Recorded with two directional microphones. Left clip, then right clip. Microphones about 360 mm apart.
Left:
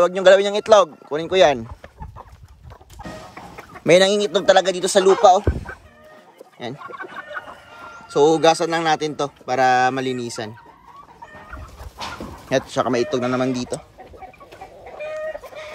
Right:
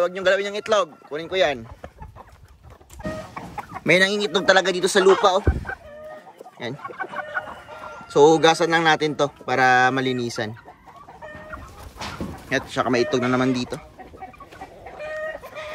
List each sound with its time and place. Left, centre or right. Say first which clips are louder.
0.0 s speech: left 7 dB; centre
3.8 s a man's voice: left 4 dB; centre
8.1 s a man's voice: even; centre
12.4 s a man's voice: left 3 dB; centre